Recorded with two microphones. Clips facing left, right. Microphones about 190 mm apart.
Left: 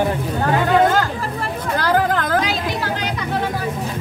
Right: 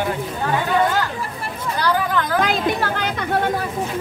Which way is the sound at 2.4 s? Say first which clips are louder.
Right 3 dB; 50° right (ahead or behind).